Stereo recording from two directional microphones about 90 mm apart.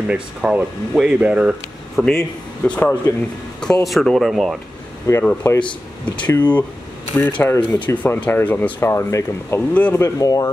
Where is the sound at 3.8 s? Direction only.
Centre (ahead or behind).